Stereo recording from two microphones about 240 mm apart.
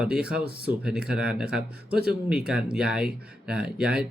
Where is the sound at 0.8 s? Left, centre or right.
Centre.